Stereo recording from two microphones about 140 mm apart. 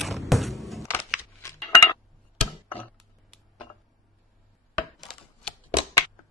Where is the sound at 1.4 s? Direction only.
20° left (ahead or behind).